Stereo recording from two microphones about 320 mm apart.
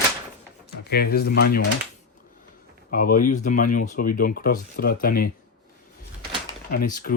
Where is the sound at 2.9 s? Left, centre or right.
Left.